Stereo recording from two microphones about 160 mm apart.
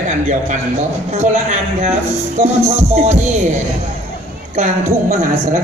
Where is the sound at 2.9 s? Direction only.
45° right (ahead or behind).